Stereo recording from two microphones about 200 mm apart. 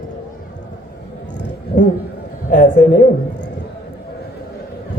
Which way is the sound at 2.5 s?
40° left (ahead or behind).